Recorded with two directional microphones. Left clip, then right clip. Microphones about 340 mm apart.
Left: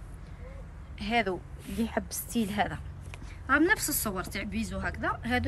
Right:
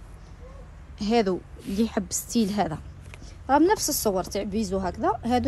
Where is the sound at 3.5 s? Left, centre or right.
Centre.